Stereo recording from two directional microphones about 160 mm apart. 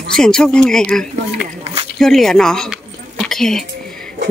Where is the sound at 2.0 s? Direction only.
Centre (ahead or behind).